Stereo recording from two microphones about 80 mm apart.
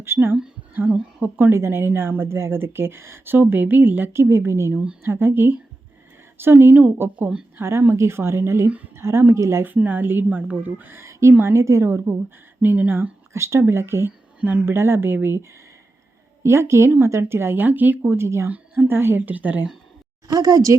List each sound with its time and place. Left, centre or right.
0.0 s a woman's voice: right
4.7 s a woman's voice: centre
5.0 s a woman's voice: right
7.6 s a woman's voice: right
9.7 s a woman's voice: right
12.6 s a woman's voice: right
18.5 s a woman's voice: right
20.2 s a woman's voice: right